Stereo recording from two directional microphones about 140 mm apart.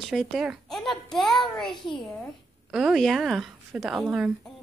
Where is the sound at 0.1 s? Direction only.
Centre (ahead or behind).